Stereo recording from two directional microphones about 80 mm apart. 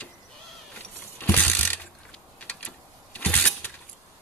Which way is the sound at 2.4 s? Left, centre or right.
Centre.